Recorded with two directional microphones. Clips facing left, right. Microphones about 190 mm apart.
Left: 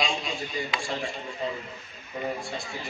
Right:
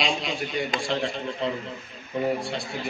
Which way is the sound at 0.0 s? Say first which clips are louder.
Right 3 dB; 75° right (ahead or behind).